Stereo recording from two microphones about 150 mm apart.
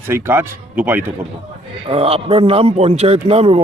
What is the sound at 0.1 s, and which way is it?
A man's voice, 15° right (ahead or behind).